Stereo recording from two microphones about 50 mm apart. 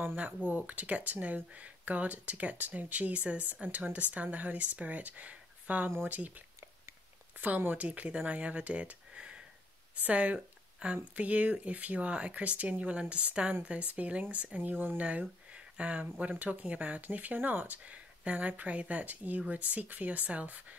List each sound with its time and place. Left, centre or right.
0.1 s speech: right
15.0 s speech: right